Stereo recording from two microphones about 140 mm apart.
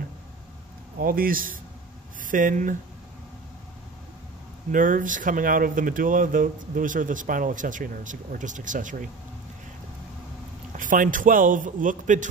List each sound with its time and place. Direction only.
0.9 s speech: 90° right
2.2 s speech: 75° right (ahead or behind)
4.6 s speech: 70° right (ahead or behind)
10.7 s speech: 70° right (ahead or behind)